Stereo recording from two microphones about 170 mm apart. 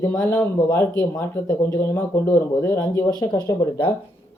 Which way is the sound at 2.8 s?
20° left (ahead or behind).